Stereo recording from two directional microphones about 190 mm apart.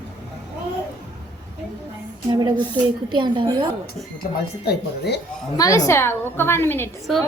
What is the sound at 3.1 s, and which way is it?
Speech, 25° right (ahead or behind).